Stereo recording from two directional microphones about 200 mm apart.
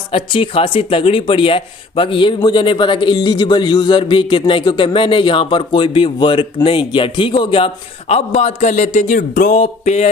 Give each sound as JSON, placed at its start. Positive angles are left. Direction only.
{"t": 0.1, "sound": "speech", "side_deg": 25}